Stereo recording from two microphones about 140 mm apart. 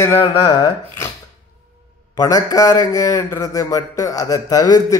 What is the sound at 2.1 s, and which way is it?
Speech, 25° left (ahead or behind).